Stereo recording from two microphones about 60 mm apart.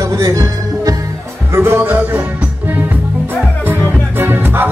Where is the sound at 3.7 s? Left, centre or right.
Right.